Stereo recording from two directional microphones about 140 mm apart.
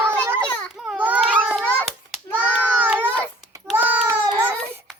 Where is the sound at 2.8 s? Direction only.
10° right (ahead or behind).